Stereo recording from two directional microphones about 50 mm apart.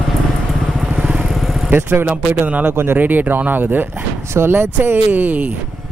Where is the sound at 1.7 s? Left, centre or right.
Right.